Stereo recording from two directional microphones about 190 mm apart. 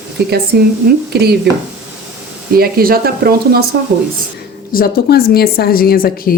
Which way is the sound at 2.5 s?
50° right (ahead or behind).